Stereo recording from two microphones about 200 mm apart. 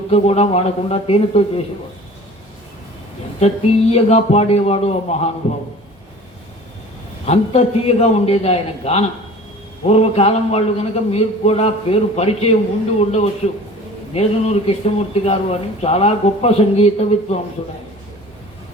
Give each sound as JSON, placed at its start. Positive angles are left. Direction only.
{"t": 0.1, "sound": "speech", "side_deg": 30}
{"t": 3.4, "sound": "speech", "side_deg": 30}
{"t": 7.3, "sound": "speech", "side_deg": 30}